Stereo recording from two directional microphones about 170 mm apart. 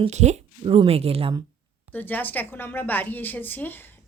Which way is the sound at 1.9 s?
10° left (ahead or behind).